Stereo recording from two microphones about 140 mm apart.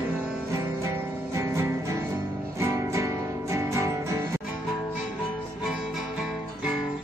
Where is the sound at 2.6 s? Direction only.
20° right (ahead or behind).